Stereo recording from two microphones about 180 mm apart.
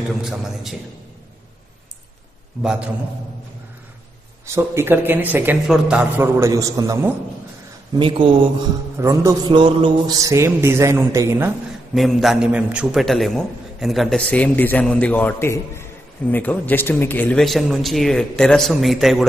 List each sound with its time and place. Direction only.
0.2 s a man's voice: centre (ahead or behind)
2.6 s a man's voice: 5° right (ahead or behind)
4.5 s a man's voice: 15° right (ahead or behind)
8.9 s a man's voice: 15° right (ahead or behind)
11.9 s a man's voice: centre (ahead or behind)